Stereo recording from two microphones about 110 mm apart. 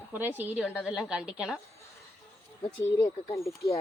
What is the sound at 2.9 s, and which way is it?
Speech, 25° left (ahead or behind).